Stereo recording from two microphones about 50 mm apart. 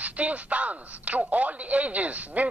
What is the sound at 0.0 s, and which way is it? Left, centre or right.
Speech, right.